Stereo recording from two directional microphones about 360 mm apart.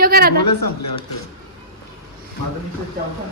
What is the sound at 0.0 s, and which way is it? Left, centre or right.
Speech, right.